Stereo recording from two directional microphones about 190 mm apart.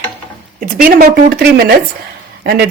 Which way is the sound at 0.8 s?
50° right (ahead or behind).